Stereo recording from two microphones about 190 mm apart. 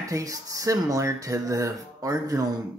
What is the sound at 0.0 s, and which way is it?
Speech, 15° right (ahead or behind).